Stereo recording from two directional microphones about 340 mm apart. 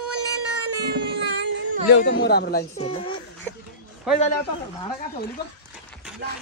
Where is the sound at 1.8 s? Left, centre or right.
Left.